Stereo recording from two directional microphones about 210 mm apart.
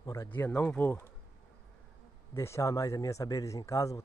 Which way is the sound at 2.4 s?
15° left (ahead or behind).